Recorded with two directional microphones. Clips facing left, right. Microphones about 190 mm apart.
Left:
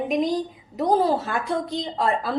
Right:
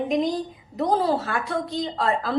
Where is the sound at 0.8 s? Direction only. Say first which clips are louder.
Left 2 dB; 20° left (ahead or behind).